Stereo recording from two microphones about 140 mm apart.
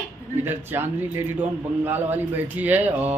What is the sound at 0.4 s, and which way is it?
Mantra, 15° right (ahead or behind).